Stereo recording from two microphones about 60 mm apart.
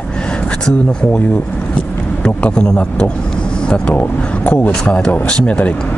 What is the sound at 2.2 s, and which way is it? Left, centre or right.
Speech, centre.